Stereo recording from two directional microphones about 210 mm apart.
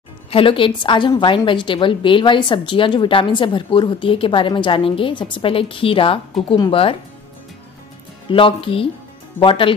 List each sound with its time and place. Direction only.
0.3 s a woman's voice: 25° left (ahead or behind)
8.3 s a woman's voice: 25° left (ahead or behind)